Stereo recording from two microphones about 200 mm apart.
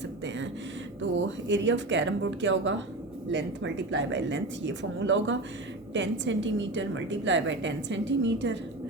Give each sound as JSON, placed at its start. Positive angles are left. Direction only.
{"t": 1.5, "sound": "a woman's voice", "side_deg": -65}